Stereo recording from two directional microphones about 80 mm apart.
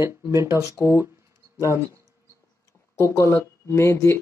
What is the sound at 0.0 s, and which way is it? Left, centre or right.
Speech, right.